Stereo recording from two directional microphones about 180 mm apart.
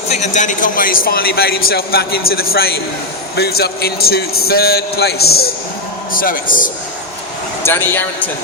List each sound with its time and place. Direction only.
0.1 s a man's voice: 40° left (ahead or behind)
7.6 s speech: 10° left (ahead or behind)